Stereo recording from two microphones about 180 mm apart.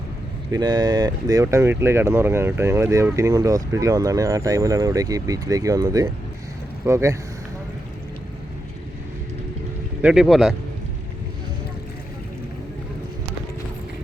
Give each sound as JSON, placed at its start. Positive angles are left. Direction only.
{"t": 0.5, "sound": "speech", "side_deg": -25}
{"t": 10.0, "sound": "speech", "side_deg": -5}